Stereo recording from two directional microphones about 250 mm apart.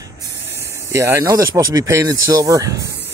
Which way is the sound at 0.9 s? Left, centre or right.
Centre.